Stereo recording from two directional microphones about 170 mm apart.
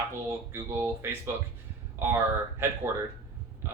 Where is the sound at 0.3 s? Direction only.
15° right (ahead or behind).